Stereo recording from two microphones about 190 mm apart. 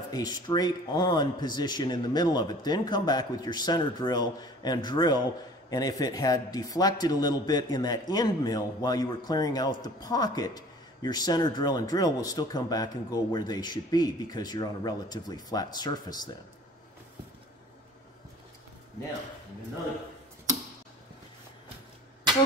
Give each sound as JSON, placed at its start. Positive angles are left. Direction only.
{"t": 0.1, "sound": "speech", "side_deg": 20}